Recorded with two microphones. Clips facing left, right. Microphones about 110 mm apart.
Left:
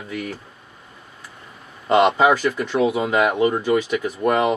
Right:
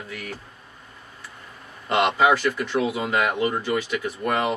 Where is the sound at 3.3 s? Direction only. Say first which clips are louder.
Left 5 dB; 5° left (ahead or behind).